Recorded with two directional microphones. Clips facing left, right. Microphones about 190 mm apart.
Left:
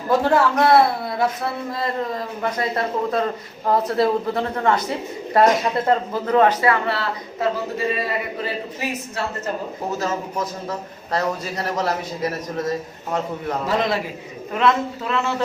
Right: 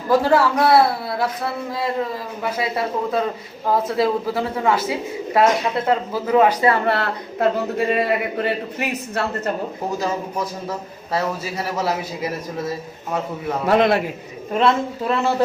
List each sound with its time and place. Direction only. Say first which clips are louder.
0.1 s speech: right 1 dB; 5° right (ahead or behind)
6.6 s speech: right 2 dB; 25° right (ahead or behind)
6.8 s a woman's voice: right 3 dB; 55° right (ahead or behind)
10.0 s a man's voice: even; 10° right (ahead or behind)
13.7 s a woman's voice: right 6 dB; 60° right (ahead or behind)
14.5 s speech: right 1 dB; 30° right (ahead or behind)